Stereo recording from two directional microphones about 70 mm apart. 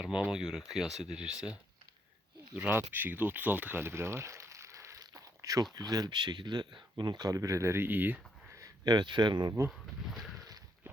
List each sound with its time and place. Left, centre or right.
0.0 s speech: centre
2.6 s speech: right
5.7 s speech: right
8.8 s speech: right
9.6 s speech: centre